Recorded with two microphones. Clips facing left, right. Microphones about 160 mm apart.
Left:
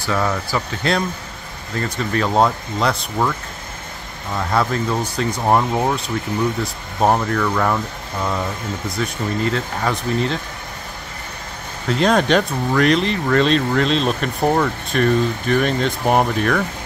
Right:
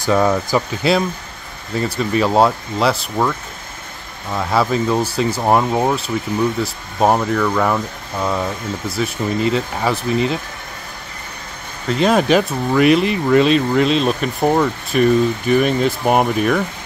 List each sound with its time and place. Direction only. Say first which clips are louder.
0.0 s speech: right 6 dB; 20° right (ahead or behind)
0.8 s speech: right 4 dB; 5° right (ahead or behind)
4.4 s speech: right 3 dB; 5° right (ahead or behind)
11.9 s speech: right 2 dB; 5° right (ahead or behind)